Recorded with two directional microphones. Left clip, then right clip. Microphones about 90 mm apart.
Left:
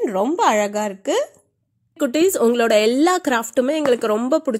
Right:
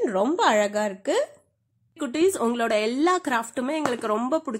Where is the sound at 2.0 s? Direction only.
55° left (ahead or behind).